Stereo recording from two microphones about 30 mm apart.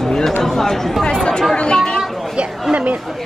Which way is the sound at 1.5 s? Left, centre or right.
Left.